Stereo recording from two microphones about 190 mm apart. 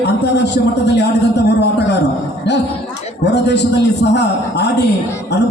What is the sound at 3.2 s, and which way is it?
A man's voice, 65° left (ahead or behind).